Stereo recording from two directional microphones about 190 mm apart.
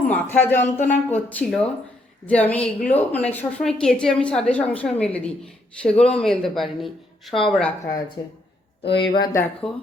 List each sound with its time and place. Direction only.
0.1 s a woman's voice: 10° left (ahead or behind)
8.2 s speech: 20° left (ahead or behind)
9.3 s speech: 10° left (ahead or behind)